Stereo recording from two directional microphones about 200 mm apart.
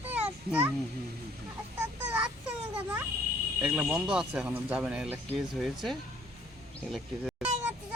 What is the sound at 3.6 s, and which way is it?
Speech, 5° right (ahead or behind).